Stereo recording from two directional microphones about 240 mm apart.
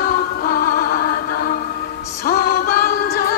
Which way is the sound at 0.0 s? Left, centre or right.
Left.